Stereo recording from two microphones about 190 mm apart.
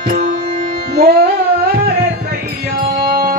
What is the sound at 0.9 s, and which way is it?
Music, 55° right (ahead or behind).